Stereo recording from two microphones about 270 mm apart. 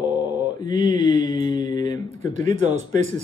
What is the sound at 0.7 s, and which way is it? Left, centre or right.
Mantra, centre.